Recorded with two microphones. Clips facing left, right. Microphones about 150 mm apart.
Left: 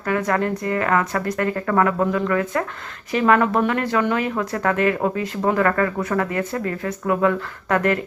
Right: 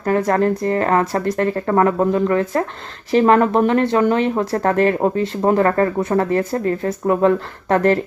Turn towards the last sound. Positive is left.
turn(degrees=-30)  # may be behind; listen again after turning